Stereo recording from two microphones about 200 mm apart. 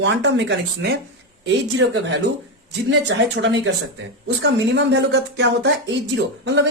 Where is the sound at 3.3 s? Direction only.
65° right (ahead or behind).